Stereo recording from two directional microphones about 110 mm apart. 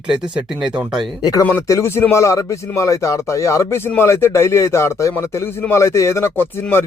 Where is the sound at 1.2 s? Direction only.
35° left (ahead or behind).